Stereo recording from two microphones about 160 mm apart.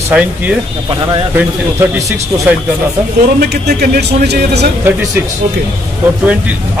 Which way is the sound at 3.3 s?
85° right.